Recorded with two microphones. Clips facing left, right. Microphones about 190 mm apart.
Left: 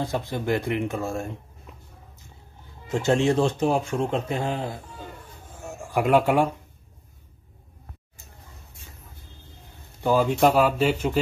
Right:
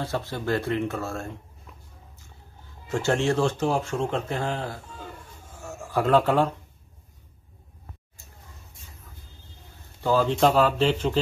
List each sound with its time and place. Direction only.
0.0 s speech: 15° left (ahead or behind)
5.6 s a sound: 15° left (ahead or behind)
10.0 s speech: 10° left (ahead or behind)